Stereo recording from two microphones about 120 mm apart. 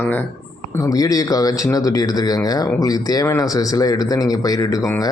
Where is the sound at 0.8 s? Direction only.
30° left (ahead or behind).